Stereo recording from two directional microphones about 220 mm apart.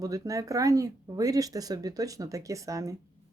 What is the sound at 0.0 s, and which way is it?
Speech, 15° right (ahead or behind).